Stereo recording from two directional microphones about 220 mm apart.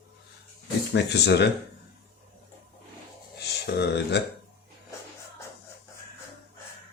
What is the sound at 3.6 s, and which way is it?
Speech, 50° left (ahead or behind).